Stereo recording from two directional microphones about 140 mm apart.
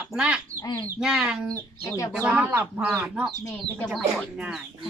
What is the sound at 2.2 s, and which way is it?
Speech, 10° right (ahead or behind).